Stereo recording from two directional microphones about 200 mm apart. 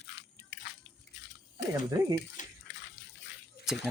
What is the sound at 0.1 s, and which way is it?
Biting, 60° left (ahead or behind).